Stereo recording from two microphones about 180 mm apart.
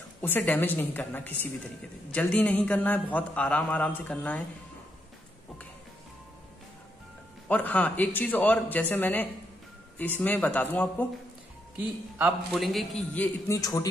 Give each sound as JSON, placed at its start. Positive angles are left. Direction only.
{"t": 0.2, "sound": "a man's voice", "side_deg": 10}
{"t": 7.4, "sound": "a man's voice", "side_deg": 10}
{"t": 11.7, "sound": "speech", "side_deg": -10}
{"t": 12.5, "sound": "a man's voice", "side_deg": 0}
{"t": 13.6, "sound": "a man's voice", "side_deg": 20}